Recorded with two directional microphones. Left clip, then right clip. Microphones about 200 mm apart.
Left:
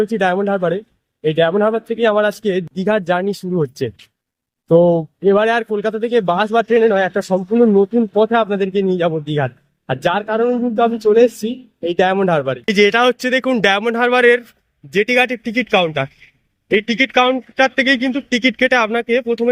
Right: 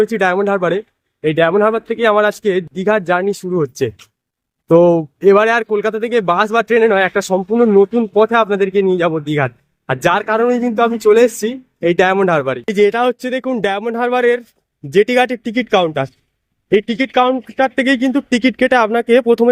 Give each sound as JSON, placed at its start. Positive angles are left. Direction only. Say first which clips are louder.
{"t": 0.0, "sound": "a man's voice", "louder": "right 2 dB", "side_deg": -10}